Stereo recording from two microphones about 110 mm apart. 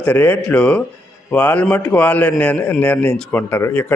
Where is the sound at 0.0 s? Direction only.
15° left (ahead or behind).